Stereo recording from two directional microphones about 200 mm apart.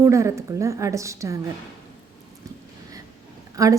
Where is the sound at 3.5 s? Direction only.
15° right (ahead or behind).